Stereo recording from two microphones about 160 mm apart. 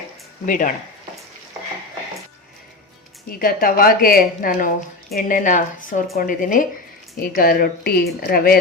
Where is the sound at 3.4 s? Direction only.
65° left (ahead or behind).